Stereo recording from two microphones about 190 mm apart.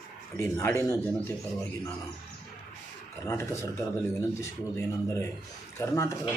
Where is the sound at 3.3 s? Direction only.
15° left (ahead or behind).